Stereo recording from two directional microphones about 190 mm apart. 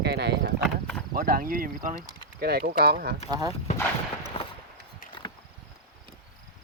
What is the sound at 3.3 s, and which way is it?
Speech, 20° right (ahead or behind).